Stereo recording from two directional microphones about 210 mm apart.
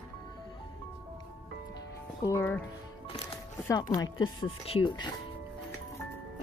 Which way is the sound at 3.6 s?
15° left (ahead or behind).